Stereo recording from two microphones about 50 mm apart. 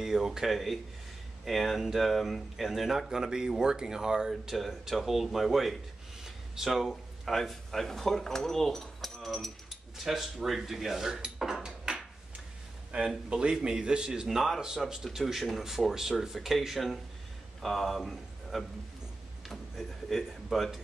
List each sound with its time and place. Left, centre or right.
0.0 s a man's voice: centre
4.3 s speech: centre
6.2 s a sound: centre
7.3 s a man's voice: centre
11.6 s a sound: centre
13.3 s a man's voice: centre
20.1 s a man's voice: centre